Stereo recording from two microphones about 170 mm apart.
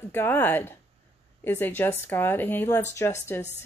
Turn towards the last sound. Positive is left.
turn(degrees=15)  # may be behind; listen again after turning